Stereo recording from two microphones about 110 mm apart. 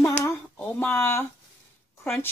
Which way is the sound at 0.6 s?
20° left (ahead or behind).